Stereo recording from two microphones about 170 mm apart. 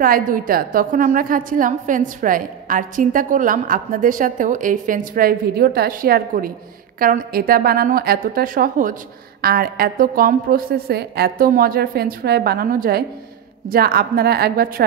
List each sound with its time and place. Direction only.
0.0 s a woman's voice: 55° right (ahead or behind)